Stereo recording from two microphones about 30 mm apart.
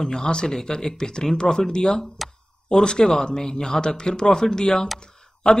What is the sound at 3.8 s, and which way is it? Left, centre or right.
A man's voice, left.